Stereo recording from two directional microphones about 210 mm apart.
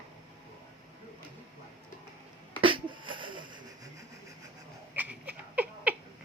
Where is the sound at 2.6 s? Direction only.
25° right (ahead or behind).